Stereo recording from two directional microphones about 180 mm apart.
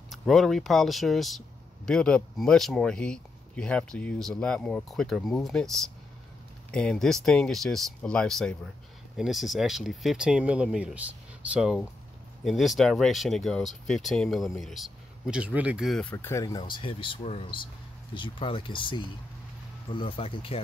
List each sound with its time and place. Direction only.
0.1 s speech: centre (ahead or behind); by 16.6 s 20° left (ahead or behind)
16.7 s speech: 30° left (ahead or behind)